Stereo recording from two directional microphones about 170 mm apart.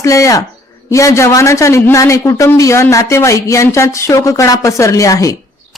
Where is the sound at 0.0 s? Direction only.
20° left (ahead or behind).